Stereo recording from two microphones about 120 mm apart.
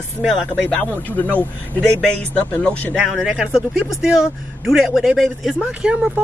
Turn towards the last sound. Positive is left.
turn(degrees=-10)  # may be behind; listen again after turning